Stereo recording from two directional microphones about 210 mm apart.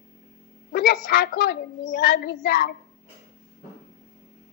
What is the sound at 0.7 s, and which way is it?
A woman's voice, 45° left (ahead or behind).